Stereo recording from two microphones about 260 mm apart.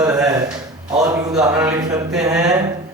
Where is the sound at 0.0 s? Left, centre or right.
Centre.